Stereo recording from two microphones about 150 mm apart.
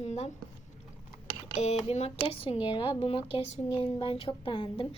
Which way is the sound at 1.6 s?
45° left (ahead or behind).